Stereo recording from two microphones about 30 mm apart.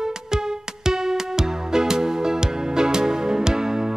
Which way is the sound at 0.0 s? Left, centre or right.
Centre.